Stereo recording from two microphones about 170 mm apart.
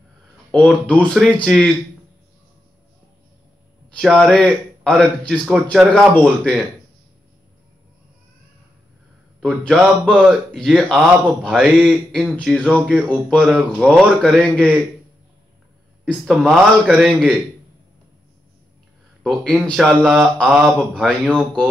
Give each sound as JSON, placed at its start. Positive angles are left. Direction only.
{"t": 0.5, "sound": "a man's voice", "side_deg": 5}
{"t": 3.9, "sound": "a man's voice", "side_deg": 5}
{"t": 9.4, "sound": "a man's voice", "side_deg": 5}
{"t": 16.1, "sound": "a man's voice", "side_deg": 0}
{"t": 19.2, "sound": "a man's voice", "side_deg": 5}